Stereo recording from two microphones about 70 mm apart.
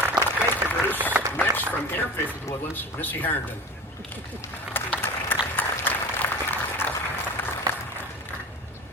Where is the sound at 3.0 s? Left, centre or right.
Left.